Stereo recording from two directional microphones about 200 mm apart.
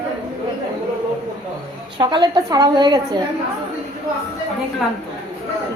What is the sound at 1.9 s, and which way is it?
A woman's voice, 25° right (ahead or behind).